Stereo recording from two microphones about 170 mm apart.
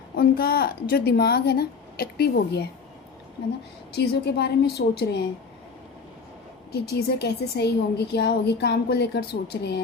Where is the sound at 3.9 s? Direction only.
75° left (ahead or behind).